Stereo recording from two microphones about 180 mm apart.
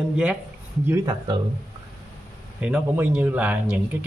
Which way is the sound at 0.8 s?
20° right (ahead or behind).